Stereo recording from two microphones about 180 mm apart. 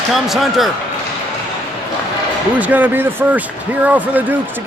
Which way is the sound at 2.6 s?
10° right (ahead or behind).